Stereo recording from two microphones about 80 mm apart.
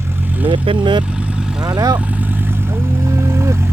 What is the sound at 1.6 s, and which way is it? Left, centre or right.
Vehicle, right.